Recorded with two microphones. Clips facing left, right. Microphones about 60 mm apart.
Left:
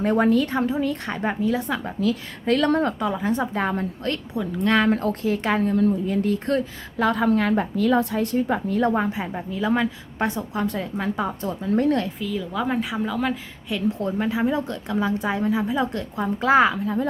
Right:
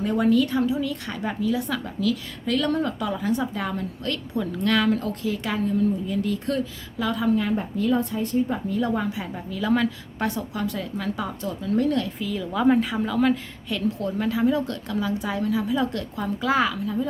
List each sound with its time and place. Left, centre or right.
0.0 s a woman's voice: left
3.0 s a woman's voice: left
8.9 s a woman's voice: left
12.2 s a woman's voice: centre
14.0 s a woman's voice: left